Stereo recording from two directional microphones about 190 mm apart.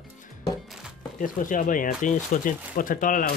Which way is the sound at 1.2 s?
45° left (ahead or behind).